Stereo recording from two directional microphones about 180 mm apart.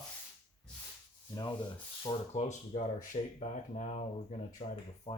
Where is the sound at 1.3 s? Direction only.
25° left (ahead or behind).